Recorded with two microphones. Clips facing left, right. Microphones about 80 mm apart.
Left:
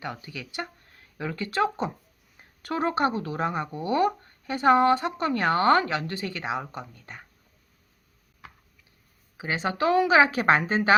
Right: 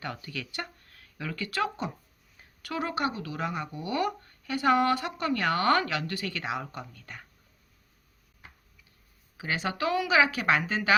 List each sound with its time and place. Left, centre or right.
0.0 s speech: centre
9.4 s speech: left